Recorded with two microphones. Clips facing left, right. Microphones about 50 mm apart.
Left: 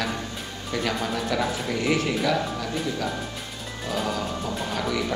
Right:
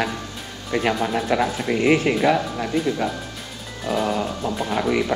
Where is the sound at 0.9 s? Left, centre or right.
Right.